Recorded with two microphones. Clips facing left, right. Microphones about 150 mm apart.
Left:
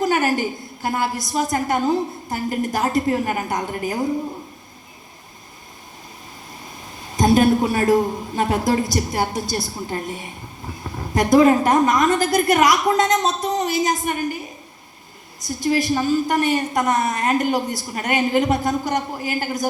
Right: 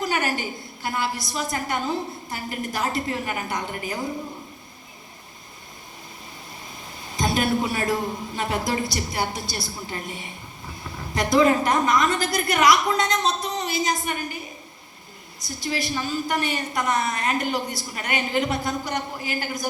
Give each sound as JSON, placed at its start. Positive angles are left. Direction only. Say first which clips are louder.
{"t": 0.0, "sound": "a woman's voice", "louder": "left 6 dB", "side_deg": 45}
{"t": 7.2, "sound": "a woman's voice", "louder": "left 8 dB", "side_deg": 50}
{"t": 15.4, "sound": "a woman's voice", "louder": "left 8 dB", "side_deg": 50}